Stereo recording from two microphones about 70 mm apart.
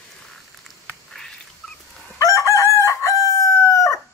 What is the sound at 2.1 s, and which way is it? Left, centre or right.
Chicken, left.